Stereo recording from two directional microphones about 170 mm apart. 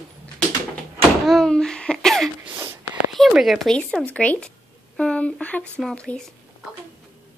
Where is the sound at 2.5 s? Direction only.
15° right (ahead or behind).